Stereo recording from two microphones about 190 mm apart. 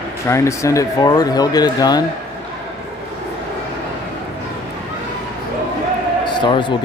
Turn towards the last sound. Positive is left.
turn(degrees=25)  # may be behind; listen again after turning